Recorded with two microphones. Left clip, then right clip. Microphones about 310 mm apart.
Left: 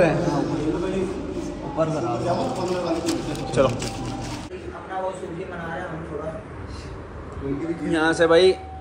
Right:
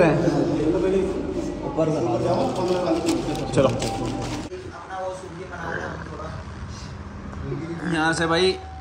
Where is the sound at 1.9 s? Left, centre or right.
Left.